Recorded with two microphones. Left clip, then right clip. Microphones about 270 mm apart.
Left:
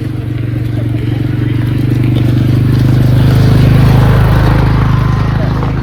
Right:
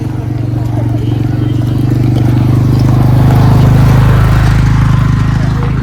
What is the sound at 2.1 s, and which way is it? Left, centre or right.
Vehicle, centre.